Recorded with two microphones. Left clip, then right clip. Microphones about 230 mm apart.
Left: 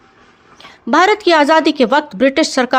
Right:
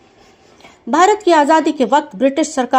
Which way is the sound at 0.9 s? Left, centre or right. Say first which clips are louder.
Left 1 dB; left.